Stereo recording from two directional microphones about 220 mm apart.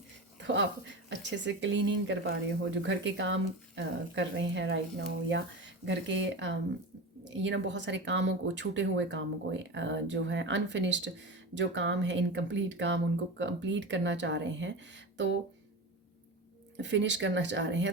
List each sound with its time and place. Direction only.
0.3 s a sound: 55° right (ahead or behind)
1.1 s speech: 55° right (ahead or behind)
16.7 s speech: 55° right (ahead or behind)